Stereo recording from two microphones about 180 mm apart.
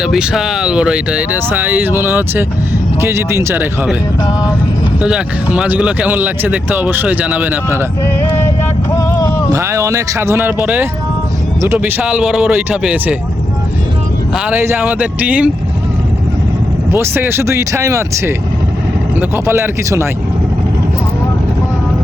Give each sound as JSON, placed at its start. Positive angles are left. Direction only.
{"t": 0.0, "sound": "speech", "side_deg": -5}
{"t": 4.9, "sound": "speech", "side_deg": -5}
{"t": 8.9, "sound": "music", "side_deg": 15}
{"t": 9.5, "sound": "speech", "side_deg": -15}
{"t": 14.3, "sound": "speech", "side_deg": -10}
{"t": 16.9, "sound": "speech", "side_deg": -15}